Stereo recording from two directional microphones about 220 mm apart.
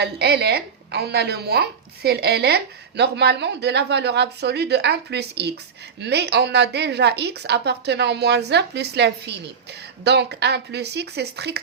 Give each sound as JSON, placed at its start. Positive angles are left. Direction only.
{"t": 0.0, "sound": "speech", "side_deg": -50}